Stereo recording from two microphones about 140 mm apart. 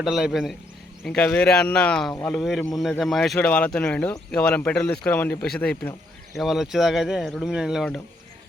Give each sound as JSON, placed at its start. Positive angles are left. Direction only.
{"t": 0.0, "sound": "speech", "side_deg": 0}